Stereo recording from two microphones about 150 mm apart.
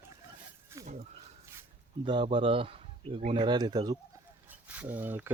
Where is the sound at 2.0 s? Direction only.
35° right (ahead or behind).